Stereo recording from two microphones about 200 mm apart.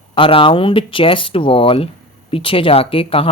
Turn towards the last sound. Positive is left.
turn(degrees=25)  # may be behind; listen again after turning